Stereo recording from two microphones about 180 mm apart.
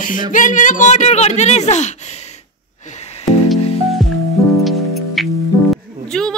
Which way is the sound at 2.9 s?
35° left (ahead or behind).